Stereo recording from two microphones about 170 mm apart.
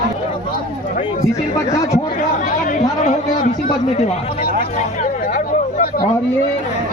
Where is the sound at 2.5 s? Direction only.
50° left (ahead or behind).